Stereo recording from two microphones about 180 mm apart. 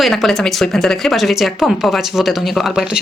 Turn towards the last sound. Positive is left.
turn(degrees=-5)  # may be behind; listen again after turning